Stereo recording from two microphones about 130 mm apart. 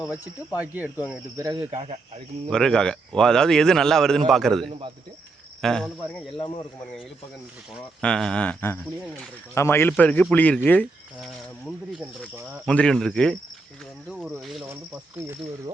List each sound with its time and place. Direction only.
0.6 s speech: 10° right (ahead or behind)
1.4 s speech: 30° right (ahead or behind)
1.7 s speech: 50° right (ahead or behind)
2.5 s a man's voice: 5° left (ahead or behind)
6.3 s speech: 45° left (ahead or behind)
8.0 s speech: 5° left (ahead or behind)
12.6 s a man's voice: 5° left (ahead or behind)
14.7 s speech: 15° right (ahead or behind)